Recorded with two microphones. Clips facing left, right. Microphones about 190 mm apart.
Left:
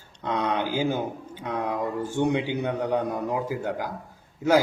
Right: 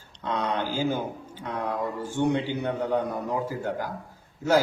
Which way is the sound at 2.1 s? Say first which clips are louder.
Even; 15° left (ahead or behind).